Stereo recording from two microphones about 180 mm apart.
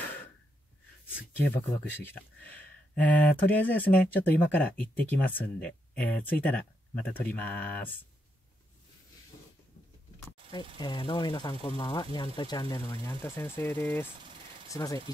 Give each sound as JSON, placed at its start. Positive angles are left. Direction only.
{"t": 1.4, "sound": "speech", "side_deg": 10}
{"t": 10.5, "sound": "speech", "side_deg": 25}